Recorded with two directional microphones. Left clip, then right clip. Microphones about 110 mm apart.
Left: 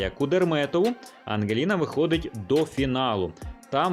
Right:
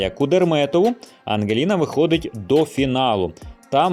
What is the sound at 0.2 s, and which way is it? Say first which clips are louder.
Speech: right 6 dB; 35° right (ahead or behind).